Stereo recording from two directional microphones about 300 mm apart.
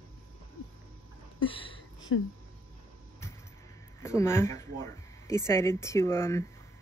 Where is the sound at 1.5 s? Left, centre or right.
Centre.